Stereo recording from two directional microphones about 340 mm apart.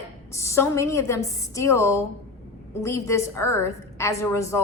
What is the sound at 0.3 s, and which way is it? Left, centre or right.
A woman's voice, centre.